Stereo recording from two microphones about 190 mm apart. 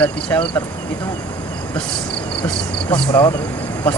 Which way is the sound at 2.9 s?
15° left (ahead or behind).